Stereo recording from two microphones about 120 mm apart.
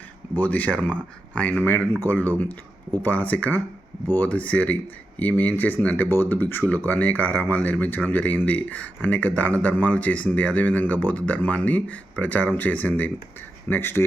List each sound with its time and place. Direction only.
0.3 s speech: 15° left (ahead or behind)